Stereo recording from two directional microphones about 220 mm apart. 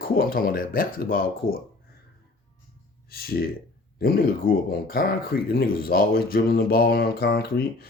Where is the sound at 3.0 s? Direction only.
45° left (ahead or behind).